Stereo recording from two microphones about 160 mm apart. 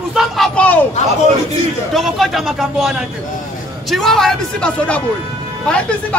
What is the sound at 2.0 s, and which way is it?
A man's voice, centre (ahead or behind).